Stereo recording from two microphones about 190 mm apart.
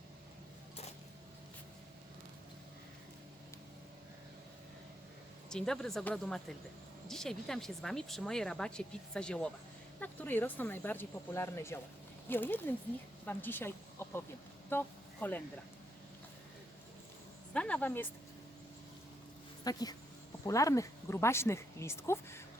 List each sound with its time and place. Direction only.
5.5 s speech: 5° left (ahead or behind)
17.5 s speech: 5° left (ahead or behind)
19.6 s speech: 20° left (ahead or behind)